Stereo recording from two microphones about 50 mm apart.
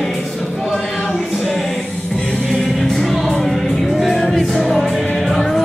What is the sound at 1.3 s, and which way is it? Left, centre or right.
Music, centre.